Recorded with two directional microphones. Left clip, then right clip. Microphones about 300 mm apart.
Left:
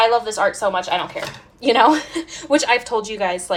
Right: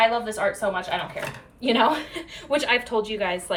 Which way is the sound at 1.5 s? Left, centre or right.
Left.